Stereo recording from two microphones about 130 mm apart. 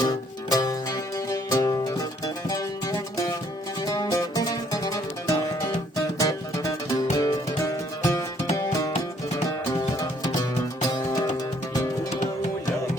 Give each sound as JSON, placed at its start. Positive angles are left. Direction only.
{"t": 0.0, "sound": "music", "side_deg": 30}